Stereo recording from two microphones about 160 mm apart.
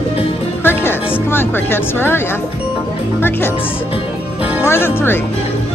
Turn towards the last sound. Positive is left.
turn(degrees=15)  # may be behind; listen again after turning